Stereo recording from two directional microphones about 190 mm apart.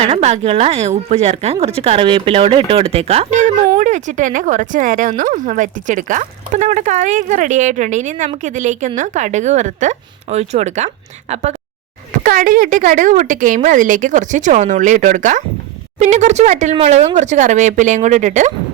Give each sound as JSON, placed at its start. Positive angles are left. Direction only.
{"t": 0.0, "sound": "speech", "side_deg": -30}
{"t": 12.2, "sound": "speech", "side_deg": -45}